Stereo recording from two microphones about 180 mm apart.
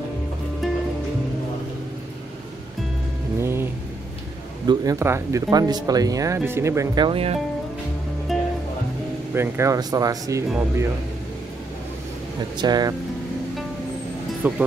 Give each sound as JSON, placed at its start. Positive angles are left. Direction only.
{"t": 3.3, "sound": "music", "side_deg": -15}
{"t": 4.6, "sound": "speech", "side_deg": -20}
{"t": 7.1, "sound": "speech", "side_deg": -35}
{"t": 8.3, "sound": "music", "side_deg": 0}
{"t": 9.3, "sound": "speech", "side_deg": -15}
{"t": 12.5, "sound": "speech", "side_deg": -25}
{"t": 14.4, "sound": "speech", "side_deg": -10}